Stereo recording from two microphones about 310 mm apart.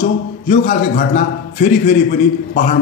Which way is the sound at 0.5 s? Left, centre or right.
Left.